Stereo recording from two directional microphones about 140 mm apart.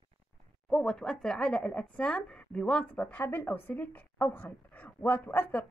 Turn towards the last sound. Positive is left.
turn(degrees=10)  # may be behind; listen again after turning